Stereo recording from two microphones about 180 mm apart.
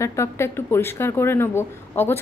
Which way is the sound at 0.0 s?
15° left (ahead or behind).